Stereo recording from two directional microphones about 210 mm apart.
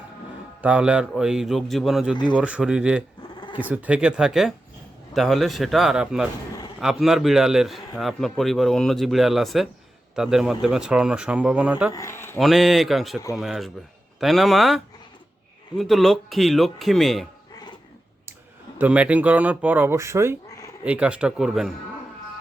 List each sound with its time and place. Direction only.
0.6 s a man's voice: 5° right (ahead or behind)
11.9 s speech: 15° left (ahead or behind)
12.4 s a man's voice: centre (ahead or behind)
15.8 s a man's voice: centre (ahead or behind)
17.5 s dishes: 20° left (ahead or behind)
18.8 s a man's voice: 5° right (ahead or behind)